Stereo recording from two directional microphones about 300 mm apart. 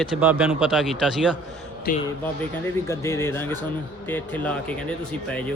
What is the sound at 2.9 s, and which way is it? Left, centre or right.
Speech, centre.